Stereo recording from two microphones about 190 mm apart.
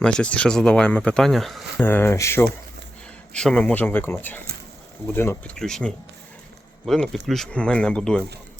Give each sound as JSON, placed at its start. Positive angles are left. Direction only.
{"t": 0.0, "sound": "speech", "side_deg": 5}